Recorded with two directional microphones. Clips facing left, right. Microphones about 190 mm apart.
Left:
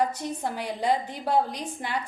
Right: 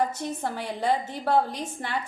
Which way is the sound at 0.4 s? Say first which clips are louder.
Even; 15° left (ahead or behind).